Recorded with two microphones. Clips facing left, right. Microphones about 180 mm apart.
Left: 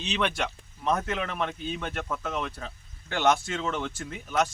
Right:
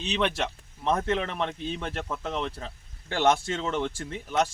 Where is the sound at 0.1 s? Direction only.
25° right (ahead or behind).